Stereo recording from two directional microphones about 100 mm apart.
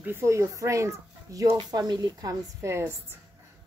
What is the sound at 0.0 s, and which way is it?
A woman's voice, 25° right (ahead or behind).